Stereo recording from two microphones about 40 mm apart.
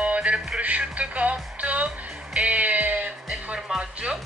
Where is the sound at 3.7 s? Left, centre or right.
Right.